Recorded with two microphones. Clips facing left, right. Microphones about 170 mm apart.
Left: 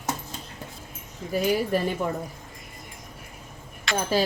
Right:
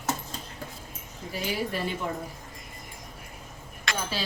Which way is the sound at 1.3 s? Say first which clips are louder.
Left 8 dB; 45° left (ahead or behind).